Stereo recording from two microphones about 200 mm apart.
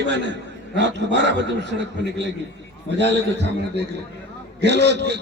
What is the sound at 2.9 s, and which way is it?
A man's voice, 60° right (ahead or behind).